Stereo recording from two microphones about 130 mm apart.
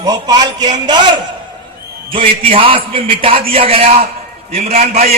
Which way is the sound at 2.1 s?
45° right (ahead or behind).